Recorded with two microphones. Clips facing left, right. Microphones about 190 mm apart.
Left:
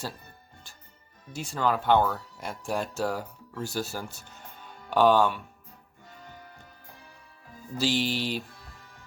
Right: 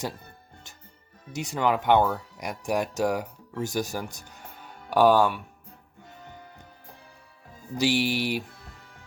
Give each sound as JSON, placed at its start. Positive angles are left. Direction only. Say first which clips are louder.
{"t": 1.3, "sound": "speech", "louder": "right 2 dB", "side_deg": -20}
{"t": 7.8, "sound": "music", "louder": "right 3 dB", "side_deg": -15}